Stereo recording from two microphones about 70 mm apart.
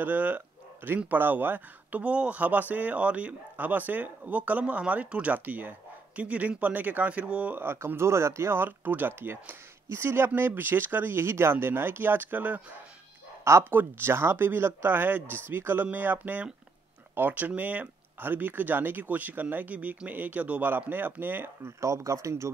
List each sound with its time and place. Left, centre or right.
0.0 s speech: right
7.5 s speech: right
13.4 s speech: right
21.8 s speech: right